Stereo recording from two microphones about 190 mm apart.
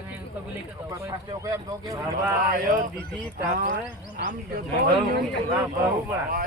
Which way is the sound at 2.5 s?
45° right (ahead or behind).